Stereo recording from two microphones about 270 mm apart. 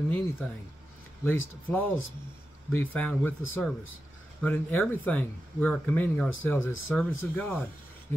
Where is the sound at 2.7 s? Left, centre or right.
Centre.